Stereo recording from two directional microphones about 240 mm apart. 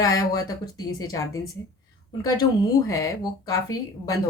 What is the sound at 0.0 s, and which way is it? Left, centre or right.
Speech, centre.